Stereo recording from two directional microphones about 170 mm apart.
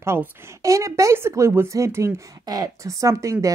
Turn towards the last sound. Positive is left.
turn(degrees=-20)  # may be behind; listen again after turning